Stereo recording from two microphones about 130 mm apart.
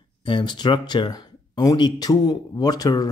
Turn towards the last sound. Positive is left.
turn(degrees=30)  # may be behind; listen again after turning